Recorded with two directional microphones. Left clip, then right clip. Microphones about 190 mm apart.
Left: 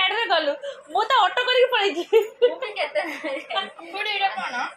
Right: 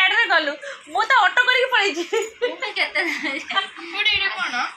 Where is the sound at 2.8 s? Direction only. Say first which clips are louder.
Right 6 dB; 30° left (ahead or behind).